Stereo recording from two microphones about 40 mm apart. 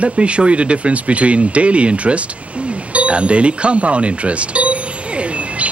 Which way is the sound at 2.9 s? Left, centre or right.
Right.